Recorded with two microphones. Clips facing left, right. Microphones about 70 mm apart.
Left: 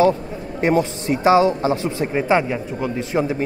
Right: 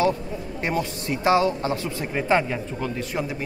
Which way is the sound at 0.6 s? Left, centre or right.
Left.